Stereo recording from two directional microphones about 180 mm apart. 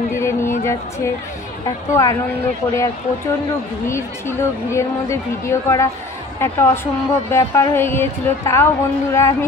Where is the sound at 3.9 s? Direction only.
15° left (ahead or behind).